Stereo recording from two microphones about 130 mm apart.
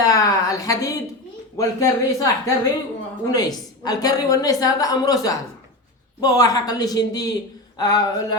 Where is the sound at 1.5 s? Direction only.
25° left (ahead or behind).